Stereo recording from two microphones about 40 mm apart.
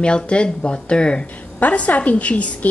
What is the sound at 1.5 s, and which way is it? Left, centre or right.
A woman's voice, left.